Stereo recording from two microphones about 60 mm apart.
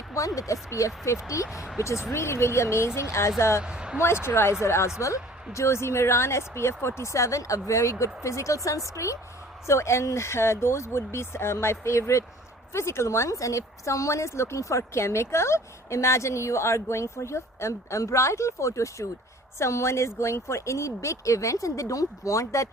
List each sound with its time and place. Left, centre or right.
0.3 s a woman's voice: left
1.5 s speech: centre
1.8 s speech: left
3.6 s speech: centre
4.0 s a woman's voice: left
9.6 s a woman's voice: left